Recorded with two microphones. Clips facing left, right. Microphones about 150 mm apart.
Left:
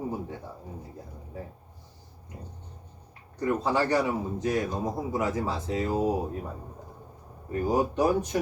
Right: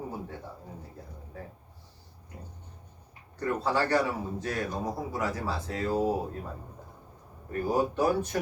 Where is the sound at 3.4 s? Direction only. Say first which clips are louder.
Left 2 dB; 15° left (ahead or behind).